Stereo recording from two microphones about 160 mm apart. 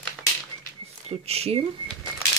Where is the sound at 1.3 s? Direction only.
40° right (ahead or behind).